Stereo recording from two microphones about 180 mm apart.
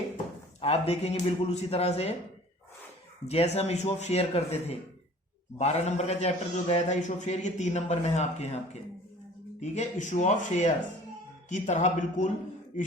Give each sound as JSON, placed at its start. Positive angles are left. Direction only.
{"t": 0.6, "sound": "a man's voice", "side_deg": 35}
{"t": 3.2, "sound": "a man's voice", "side_deg": 35}